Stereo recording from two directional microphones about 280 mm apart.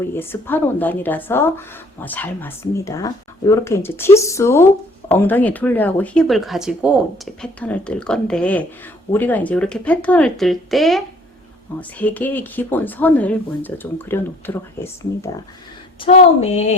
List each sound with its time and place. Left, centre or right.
0.1 s speech: centre
16.0 s speech: left